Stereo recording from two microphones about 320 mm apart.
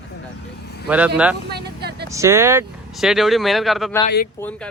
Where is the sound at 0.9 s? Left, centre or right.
Centre.